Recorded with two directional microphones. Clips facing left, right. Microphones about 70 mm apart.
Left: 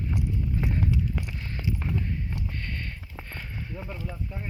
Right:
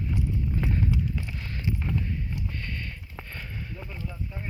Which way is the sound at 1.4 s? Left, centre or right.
Left.